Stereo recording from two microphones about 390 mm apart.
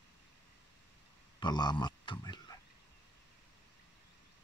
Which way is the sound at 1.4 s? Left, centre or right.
Centre.